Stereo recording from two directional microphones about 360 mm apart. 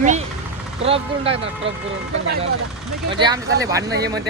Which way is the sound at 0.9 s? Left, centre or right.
Centre.